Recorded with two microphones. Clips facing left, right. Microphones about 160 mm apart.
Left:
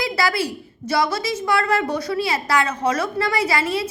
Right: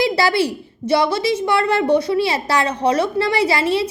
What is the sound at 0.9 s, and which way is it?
A woman's voice, 30° right (ahead or behind).